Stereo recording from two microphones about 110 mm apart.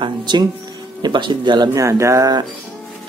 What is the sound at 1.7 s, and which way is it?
Speech, 25° right (ahead or behind).